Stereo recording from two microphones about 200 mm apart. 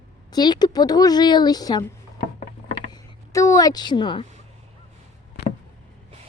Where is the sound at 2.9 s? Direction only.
15° left (ahead or behind).